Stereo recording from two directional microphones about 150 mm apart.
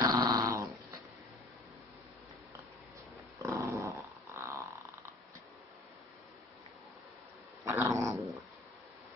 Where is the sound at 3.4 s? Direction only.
20° right (ahead or behind).